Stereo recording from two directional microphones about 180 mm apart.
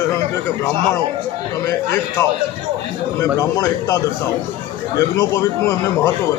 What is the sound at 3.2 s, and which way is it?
A man's voice, 20° left (ahead or behind).